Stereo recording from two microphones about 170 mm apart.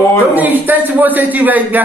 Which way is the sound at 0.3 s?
10° right (ahead or behind).